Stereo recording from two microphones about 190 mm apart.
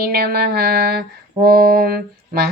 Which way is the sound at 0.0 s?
55° right (ahead or behind).